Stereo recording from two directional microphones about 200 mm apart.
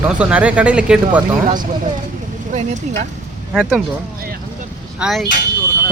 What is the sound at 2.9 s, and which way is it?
Speech, 35° right (ahead or behind).